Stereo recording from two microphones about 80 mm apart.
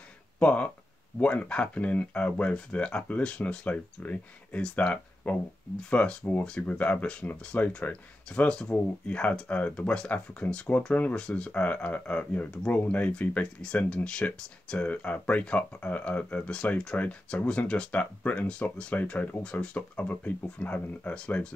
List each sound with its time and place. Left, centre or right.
0.4 s speech: centre